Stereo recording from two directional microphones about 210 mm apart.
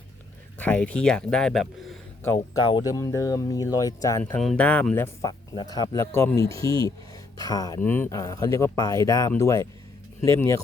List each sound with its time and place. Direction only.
0.6 s speech: 5° left (ahead or behind)
2.6 s speech: 20° left (ahead or behind)
4.2 s speech: 5° left (ahead or behind)